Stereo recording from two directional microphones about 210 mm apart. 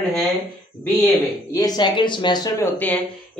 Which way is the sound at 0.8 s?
10° left (ahead or behind).